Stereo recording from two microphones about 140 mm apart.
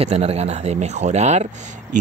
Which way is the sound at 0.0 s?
45° right (ahead or behind).